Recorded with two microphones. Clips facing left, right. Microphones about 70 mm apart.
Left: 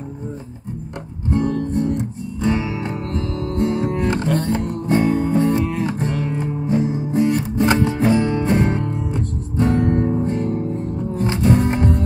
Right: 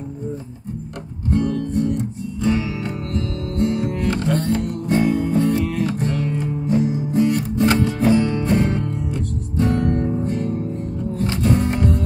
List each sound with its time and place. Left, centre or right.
1.3 s music: left